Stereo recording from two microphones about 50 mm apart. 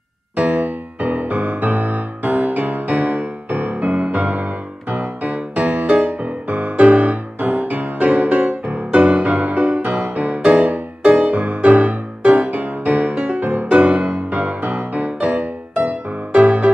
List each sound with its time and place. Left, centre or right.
0.4 s music: right